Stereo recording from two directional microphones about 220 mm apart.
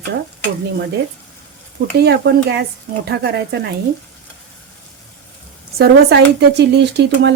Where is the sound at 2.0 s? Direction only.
50° right (ahead or behind).